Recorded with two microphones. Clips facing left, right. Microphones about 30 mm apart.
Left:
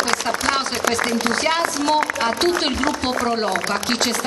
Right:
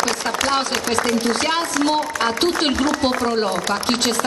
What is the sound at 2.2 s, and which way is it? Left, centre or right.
Speech, centre.